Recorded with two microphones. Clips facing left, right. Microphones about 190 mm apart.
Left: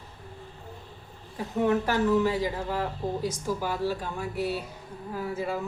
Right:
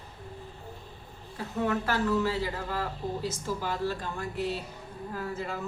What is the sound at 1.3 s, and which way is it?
A woman's voice, 15° left (ahead or behind).